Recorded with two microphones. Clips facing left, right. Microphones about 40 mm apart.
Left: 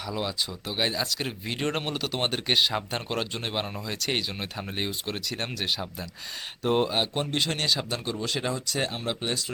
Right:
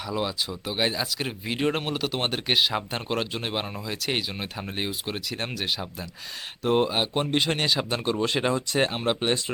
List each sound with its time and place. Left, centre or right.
0.0 s speech: centre; by 9.4 s right